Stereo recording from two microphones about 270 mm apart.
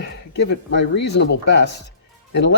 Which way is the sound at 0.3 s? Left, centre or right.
Left.